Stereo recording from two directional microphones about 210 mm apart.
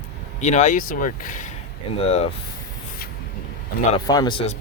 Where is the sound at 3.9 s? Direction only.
20° left (ahead or behind).